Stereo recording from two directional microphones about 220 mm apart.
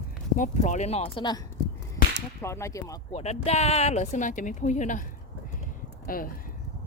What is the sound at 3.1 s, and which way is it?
Speech, 30° left (ahead or behind).